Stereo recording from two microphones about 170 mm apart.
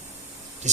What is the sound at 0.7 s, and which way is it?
Speech, 45° right (ahead or behind).